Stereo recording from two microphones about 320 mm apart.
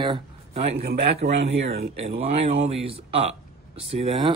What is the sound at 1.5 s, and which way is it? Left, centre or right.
Speech, centre.